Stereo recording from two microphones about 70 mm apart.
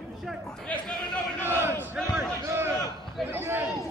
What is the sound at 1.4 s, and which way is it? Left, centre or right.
Battle cry, right.